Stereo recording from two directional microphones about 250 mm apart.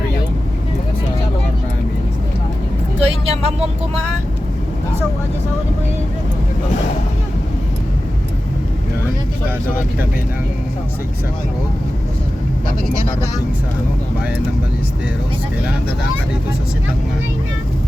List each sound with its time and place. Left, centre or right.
3.0 s vehicle: right